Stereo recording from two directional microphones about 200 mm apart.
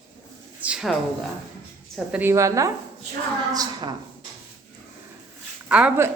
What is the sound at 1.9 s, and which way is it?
Speech, 5° right (ahead or behind).